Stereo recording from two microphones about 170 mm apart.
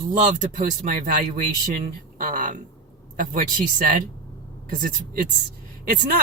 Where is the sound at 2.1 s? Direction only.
50° right (ahead or behind).